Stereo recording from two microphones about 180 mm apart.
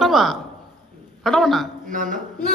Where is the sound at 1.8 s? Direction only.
45° right (ahead or behind).